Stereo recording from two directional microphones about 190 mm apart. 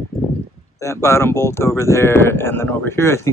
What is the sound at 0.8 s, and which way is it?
Speech, 15° left (ahead or behind).